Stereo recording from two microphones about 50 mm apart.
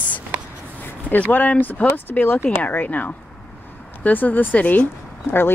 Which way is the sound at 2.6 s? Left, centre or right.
Left.